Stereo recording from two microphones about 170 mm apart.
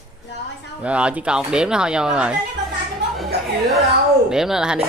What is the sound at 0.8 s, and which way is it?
Speech, 5° right (ahead or behind).